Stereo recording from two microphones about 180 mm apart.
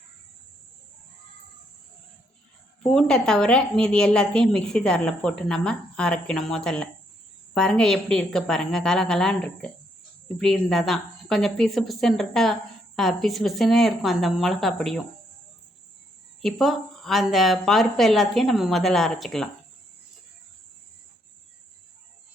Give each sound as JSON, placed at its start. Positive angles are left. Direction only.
{"t": 2.8, "sound": "a woman's voice", "side_deg": 5}
{"t": 16.4, "sound": "a woman's voice", "side_deg": 0}